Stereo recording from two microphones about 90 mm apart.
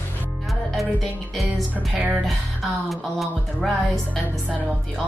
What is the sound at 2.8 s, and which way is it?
Music, centre (ahead or behind).